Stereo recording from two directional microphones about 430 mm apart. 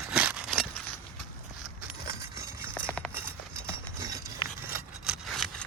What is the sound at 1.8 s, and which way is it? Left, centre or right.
Keys jangling, centre.